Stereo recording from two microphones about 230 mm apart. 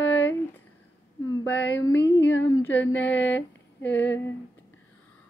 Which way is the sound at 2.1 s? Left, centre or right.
Left.